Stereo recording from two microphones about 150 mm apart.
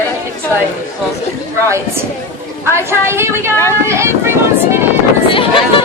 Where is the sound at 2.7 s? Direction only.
15° right (ahead or behind).